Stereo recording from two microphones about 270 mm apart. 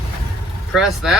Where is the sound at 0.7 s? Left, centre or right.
Centre.